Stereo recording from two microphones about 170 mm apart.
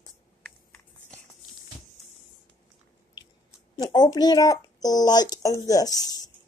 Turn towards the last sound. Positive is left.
turn(degrees=20)  # may be behind; listen again after turning